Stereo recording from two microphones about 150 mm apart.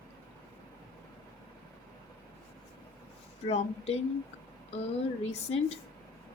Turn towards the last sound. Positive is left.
turn(degrees=45)  # may be behind; listen again after turning